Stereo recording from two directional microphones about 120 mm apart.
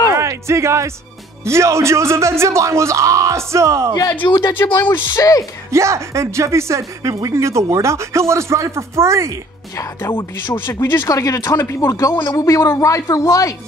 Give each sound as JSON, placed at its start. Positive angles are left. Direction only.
{"t": 0.1, "sound": "music", "side_deg": -25}
{"t": 1.4, "sound": "speech", "side_deg": -25}
{"t": 4.2, "sound": "speech", "side_deg": 40}
{"t": 4.7, "sound": "speech", "side_deg": 20}
{"t": 5.7, "sound": "speech", "side_deg": -25}
{"t": 10.5, "sound": "speech", "side_deg": 25}